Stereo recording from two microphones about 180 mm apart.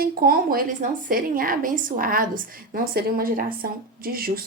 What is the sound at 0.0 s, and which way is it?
A woman's voice, 55° right (ahead or behind).